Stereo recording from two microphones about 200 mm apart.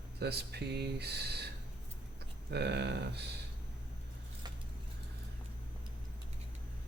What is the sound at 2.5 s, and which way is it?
Speech, 55° right (ahead or behind).